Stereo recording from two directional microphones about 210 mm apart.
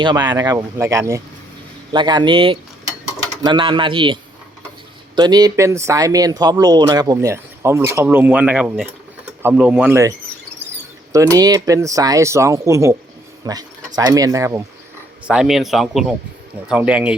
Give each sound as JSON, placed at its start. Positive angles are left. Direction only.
{"t": 0.0, "sound": "speech", "side_deg": -20}
{"t": 11.1, "sound": "speech", "side_deg": -15}
{"t": 15.3, "sound": "speech", "side_deg": -5}